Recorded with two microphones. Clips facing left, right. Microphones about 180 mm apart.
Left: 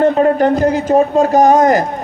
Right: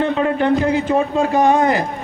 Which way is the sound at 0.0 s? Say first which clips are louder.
Left 6 dB; 40° left (ahead or behind).